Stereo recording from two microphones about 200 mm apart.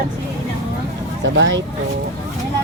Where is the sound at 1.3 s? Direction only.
65° right (ahead or behind).